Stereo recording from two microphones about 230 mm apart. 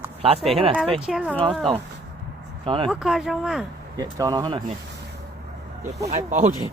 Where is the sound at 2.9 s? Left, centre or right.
Centre.